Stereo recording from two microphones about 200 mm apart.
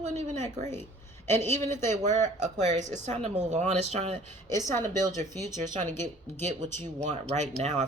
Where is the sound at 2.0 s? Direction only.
35° right (ahead or behind).